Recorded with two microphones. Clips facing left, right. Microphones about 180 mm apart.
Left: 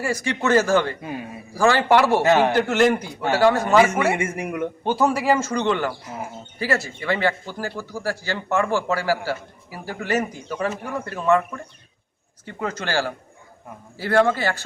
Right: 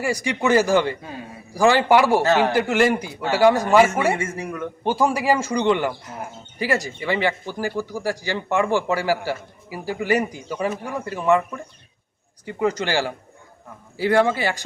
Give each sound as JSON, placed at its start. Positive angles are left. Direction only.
{"t": 0.0, "sound": "speech", "side_deg": -15}
{"t": 2.2, "sound": "a man's voice", "side_deg": 15}
{"t": 2.6, "sound": "speech", "side_deg": -10}
{"t": 4.1, "sound": "a man's voice", "side_deg": 20}
{"t": 4.9, "sound": "speech", "side_deg": -10}
{"t": 5.9, "sound": "speech", "side_deg": 5}
{"t": 6.6, "sound": "speech", "side_deg": -15}